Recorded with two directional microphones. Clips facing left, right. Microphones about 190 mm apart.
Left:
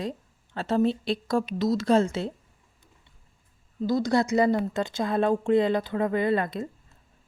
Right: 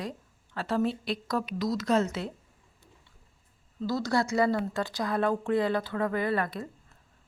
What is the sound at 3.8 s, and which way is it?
Speech, 15° left (ahead or behind).